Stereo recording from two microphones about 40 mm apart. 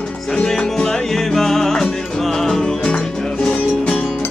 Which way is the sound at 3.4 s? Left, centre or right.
Left.